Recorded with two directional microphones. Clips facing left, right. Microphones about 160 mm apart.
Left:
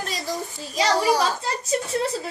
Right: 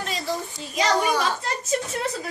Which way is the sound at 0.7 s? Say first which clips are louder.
Left 2 dB; 35° left (ahead or behind).